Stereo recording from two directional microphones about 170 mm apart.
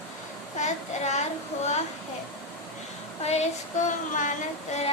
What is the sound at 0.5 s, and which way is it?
Speech, 40° left (ahead or behind).